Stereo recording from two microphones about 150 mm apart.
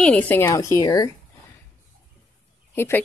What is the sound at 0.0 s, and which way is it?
Speech, 10° left (ahead or behind).